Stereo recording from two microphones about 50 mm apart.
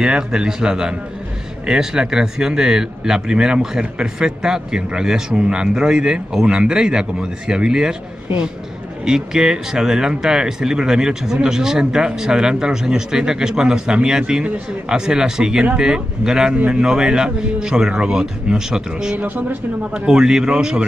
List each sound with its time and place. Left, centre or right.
0.0 s speech: centre
9.0 s speech: centre
16.5 s speech: right
16.8 s speech: centre
19.1 s speech: right
19.9 s speech: centre